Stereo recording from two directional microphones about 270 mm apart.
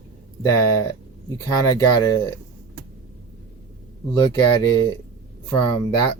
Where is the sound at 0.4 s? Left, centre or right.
Centre.